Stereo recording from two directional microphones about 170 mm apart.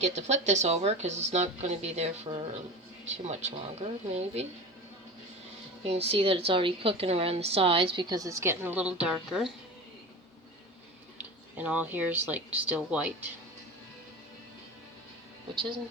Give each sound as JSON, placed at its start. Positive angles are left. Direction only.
{"t": 0.0, "sound": "a woman's voice", "side_deg": -45}
{"t": 5.8, "sound": "a woman's voice", "side_deg": -35}
{"t": 11.2, "sound": "speech", "side_deg": -10}